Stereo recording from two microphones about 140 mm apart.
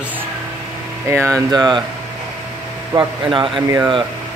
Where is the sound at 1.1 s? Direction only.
20° right (ahead or behind).